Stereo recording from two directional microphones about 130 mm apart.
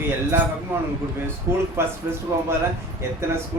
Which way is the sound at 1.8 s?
20° right (ahead or behind).